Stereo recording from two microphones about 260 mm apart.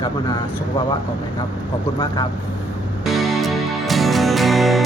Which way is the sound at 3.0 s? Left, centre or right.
Centre.